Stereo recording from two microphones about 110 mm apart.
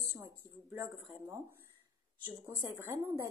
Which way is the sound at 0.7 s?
20° right (ahead or behind).